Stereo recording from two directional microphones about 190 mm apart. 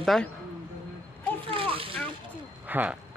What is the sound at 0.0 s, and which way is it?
Speech, centre (ahead or behind).